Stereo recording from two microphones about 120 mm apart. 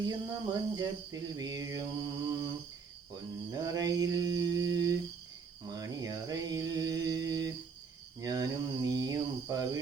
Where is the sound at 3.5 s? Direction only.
30° right (ahead or behind).